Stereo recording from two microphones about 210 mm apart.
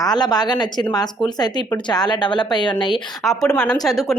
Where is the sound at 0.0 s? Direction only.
20° left (ahead or behind).